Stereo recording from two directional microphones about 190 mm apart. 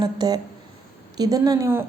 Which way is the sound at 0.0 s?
20° right (ahead or behind).